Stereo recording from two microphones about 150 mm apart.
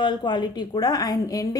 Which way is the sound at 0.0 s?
30° left (ahead or behind).